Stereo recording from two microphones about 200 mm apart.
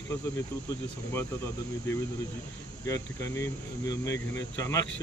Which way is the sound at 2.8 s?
15° left (ahead or behind).